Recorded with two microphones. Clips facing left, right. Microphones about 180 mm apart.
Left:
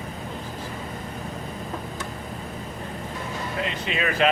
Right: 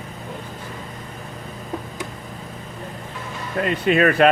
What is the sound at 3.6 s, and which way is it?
Speech, 50° right (ahead or behind).